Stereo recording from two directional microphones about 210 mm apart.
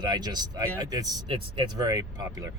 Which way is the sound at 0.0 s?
20° right (ahead or behind).